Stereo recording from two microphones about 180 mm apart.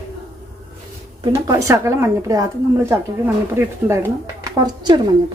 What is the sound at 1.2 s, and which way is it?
A woman's voice, 20° right (ahead or behind).